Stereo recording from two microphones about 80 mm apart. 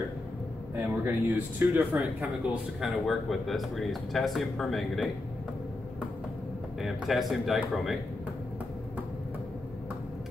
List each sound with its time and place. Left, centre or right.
0.7 s speech: right
1.7 s speech: centre
2.8 s speech: centre
6.8 s speech: centre